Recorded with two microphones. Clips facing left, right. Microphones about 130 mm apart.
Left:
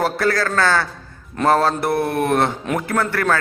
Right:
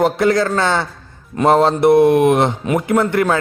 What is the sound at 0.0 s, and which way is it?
A man's voice, 20° right (ahead or behind).